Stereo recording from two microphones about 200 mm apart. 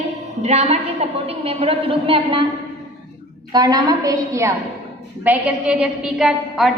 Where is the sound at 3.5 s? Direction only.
20° right (ahead or behind).